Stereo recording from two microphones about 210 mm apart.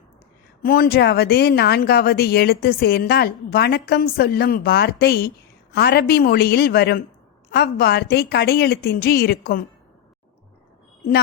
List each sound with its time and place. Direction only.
0.6 s a woman's voice: 45° left (ahead or behind)